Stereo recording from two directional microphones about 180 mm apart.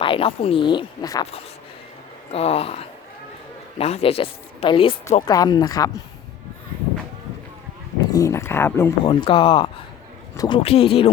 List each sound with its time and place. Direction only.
0.0 s a woman's voice: 30° left (ahead or behind)
2.3 s a woman's voice: 35° left (ahead or behind)
8.1 s speech: 15° left (ahead or behind)
9.0 s a woman's voice: 30° left (ahead or behind)
10.6 s speech: 35° left (ahead or behind)